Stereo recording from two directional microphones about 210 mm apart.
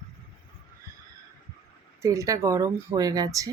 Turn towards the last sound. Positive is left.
turn(degrees=-15)  # may be behind; listen again after turning